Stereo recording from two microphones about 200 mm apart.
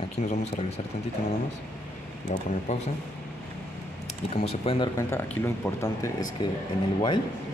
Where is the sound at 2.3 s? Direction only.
40° left (ahead or behind).